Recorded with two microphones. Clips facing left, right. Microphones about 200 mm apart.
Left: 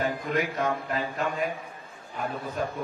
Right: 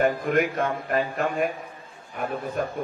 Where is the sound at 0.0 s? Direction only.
55° right (ahead or behind).